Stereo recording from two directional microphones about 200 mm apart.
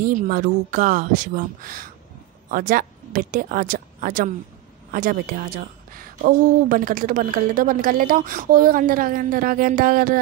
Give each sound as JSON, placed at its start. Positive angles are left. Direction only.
{"t": 0.0, "sound": "a woman's voice", "side_deg": -45}